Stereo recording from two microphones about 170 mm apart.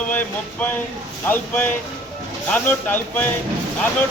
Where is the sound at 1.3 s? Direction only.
10° left (ahead or behind).